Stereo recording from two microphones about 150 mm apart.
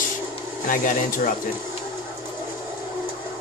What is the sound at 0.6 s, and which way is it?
Speech, 65° left (ahead or behind).